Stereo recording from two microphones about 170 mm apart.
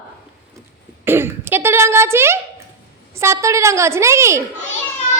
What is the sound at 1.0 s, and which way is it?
A woman's voice, 15° right (ahead or behind).